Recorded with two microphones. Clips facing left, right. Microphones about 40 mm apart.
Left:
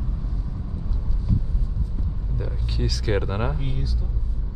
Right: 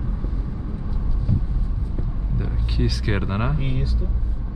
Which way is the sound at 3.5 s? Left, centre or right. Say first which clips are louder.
Right 4 dB; right.